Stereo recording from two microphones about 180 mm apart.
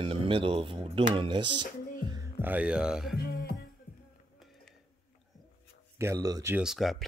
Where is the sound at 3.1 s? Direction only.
60° left (ahead or behind).